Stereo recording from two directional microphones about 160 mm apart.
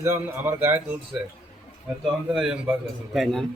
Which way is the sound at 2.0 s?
5° right (ahead or behind).